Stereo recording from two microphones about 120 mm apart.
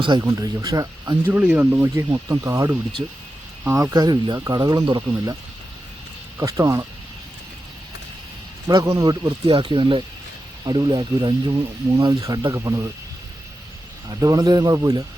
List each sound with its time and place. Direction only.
0.2 s speech: 25° right (ahead or behind)
1.3 s speech: 15° right (ahead or behind)
3.9 s speech: 35° right (ahead or behind)
8.6 s speech: 30° right (ahead or behind)
9.2 s speech: 45° right (ahead or behind)
14.1 s speech: 30° right (ahead or behind)